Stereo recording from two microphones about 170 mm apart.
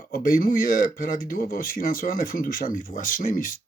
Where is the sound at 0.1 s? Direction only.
60° left (ahead or behind).